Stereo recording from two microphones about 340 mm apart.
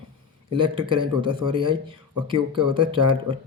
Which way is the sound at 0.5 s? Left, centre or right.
Centre.